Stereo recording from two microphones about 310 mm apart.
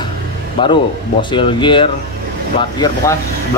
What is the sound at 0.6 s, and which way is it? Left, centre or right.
Speech, centre.